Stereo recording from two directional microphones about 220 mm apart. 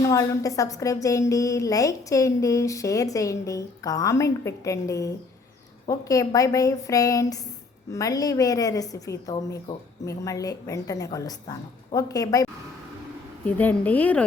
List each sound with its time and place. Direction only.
0.1 s a woman's voice: 15° left (ahead or behind)
13.6 s a woman's voice: 5° left (ahead or behind)